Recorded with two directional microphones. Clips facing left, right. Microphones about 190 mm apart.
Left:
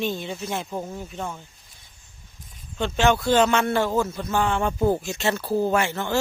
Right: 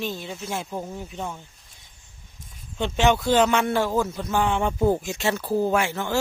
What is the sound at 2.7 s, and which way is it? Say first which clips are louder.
Speech: even; 15° right (ahead or behind).